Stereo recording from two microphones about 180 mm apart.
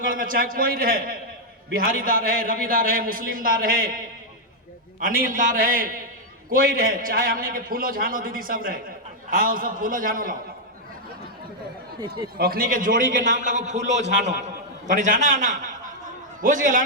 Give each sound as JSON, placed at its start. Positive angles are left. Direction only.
{"t": 0.0, "sound": "a man's voice", "side_deg": -50}
{"t": 11.9, "sound": "speech", "side_deg": -25}
{"t": 12.4, "sound": "a man's voice", "side_deg": -55}
{"t": 13.8, "sound": "a man's voice", "side_deg": -85}
{"t": 14.3, "sound": "a man's voice", "side_deg": -45}